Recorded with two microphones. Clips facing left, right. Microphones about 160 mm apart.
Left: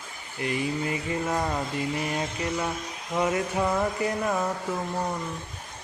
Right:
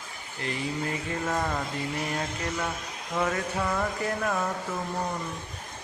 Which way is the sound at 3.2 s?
15° left (ahead or behind).